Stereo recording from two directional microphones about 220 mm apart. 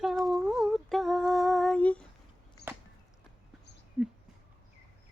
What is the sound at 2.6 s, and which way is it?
Arrow, 50° left (ahead or behind).